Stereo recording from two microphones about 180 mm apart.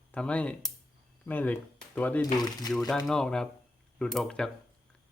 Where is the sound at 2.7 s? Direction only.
5° left (ahead or behind).